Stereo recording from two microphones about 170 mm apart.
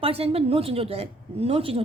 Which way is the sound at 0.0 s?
35° right (ahead or behind).